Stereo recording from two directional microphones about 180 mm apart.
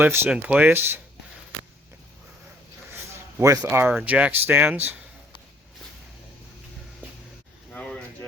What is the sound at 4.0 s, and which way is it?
Speech, 5° right (ahead or behind).